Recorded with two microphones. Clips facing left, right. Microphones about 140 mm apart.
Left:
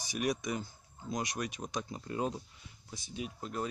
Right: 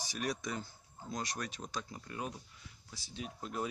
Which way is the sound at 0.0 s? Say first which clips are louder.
Left 4 dB; 15° left (ahead or behind).